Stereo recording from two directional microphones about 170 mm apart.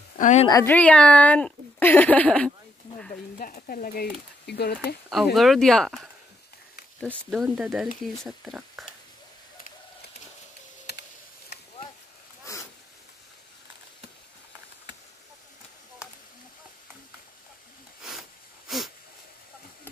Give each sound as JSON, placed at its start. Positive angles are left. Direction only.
{"t": 0.2, "sound": "a woman's voice", "side_deg": 45}
{"t": 0.5, "sound": "a woman's voice", "side_deg": 20}
{"t": 0.7, "sound": "speech", "side_deg": 5}
{"t": 3.3, "sound": "speech", "side_deg": 55}
{"t": 5.1, "sound": "speech", "side_deg": 0}
{"t": 7.2, "sound": "speech", "side_deg": 0}
{"t": 10.9, "sound": "computer keyboard", "side_deg": 80}
{"t": 18.7, "sound": "wheeze", "side_deg": 0}